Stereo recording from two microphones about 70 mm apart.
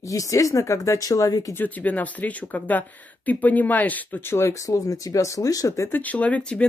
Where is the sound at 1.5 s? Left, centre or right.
Left.